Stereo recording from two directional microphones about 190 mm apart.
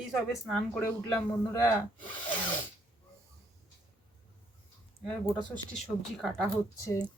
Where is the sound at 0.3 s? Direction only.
Centre (ahead or behind).